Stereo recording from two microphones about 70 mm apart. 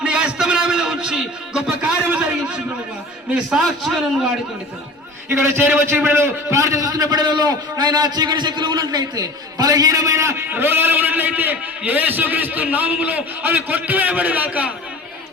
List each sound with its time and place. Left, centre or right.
0.0 s a sound: centre
3.5 s a man's voice: centre
5.3 s a man's voice: right
10.5 s a man's voice: right